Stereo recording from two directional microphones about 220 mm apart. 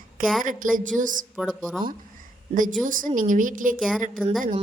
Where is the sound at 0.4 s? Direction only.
35° right (ahead or behind).